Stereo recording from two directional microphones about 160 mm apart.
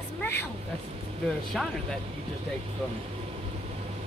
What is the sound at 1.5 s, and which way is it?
Speech, centre (ahead or behind).